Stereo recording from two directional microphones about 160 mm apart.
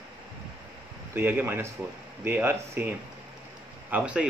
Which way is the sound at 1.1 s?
15° right (ahead or behind).